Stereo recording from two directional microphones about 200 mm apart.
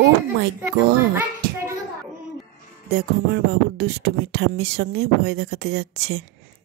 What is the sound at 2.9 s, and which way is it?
Speech, 55° right (ahead or behind).